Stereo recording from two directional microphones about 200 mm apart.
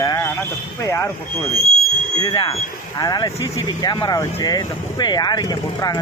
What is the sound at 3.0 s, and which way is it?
Speech, 20° left (ahead or behind).